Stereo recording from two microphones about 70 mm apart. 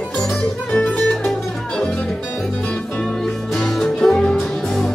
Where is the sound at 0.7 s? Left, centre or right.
Centre.